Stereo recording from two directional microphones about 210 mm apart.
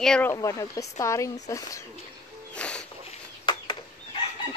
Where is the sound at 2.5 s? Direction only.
5° left (ahead or behind).